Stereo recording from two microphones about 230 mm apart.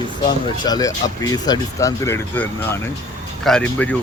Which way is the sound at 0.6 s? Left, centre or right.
Centre.